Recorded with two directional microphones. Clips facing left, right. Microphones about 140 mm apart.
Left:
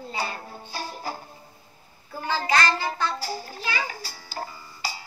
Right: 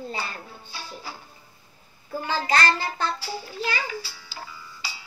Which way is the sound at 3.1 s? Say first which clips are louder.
Even; 45° left (ahead or behind).